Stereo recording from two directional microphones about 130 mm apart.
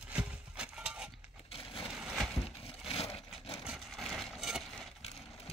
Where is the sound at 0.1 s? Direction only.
10° right (ahead or behind).